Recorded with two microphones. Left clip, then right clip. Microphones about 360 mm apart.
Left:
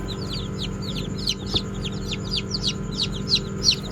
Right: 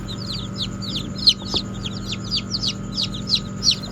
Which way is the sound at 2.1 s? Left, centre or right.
Right.